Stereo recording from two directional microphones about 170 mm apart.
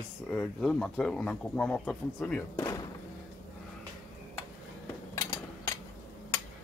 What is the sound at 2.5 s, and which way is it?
Speech, 20° left (ahead or behind).